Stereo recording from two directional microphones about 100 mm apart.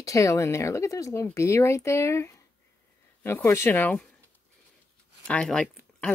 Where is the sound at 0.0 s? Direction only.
30° left (ahead or behind).